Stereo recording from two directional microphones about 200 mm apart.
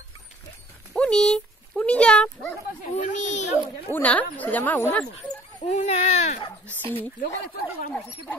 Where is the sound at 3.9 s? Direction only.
5° left (ahead or behind).